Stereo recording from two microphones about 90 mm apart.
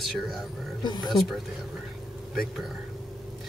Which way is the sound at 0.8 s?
50° left (ahead or behind).